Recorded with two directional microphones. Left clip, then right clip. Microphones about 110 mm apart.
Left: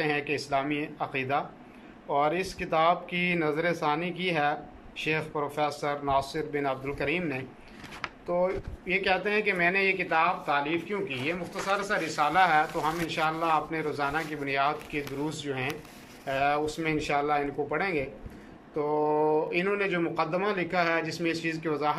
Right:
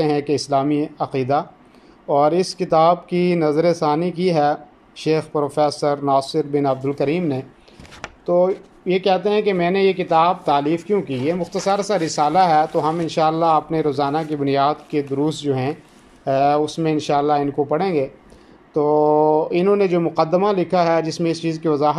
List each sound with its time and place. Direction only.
0.0 s speech: 45° right (ahead or behind)